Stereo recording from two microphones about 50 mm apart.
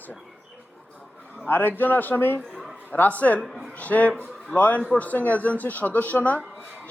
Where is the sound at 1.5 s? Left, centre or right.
Left.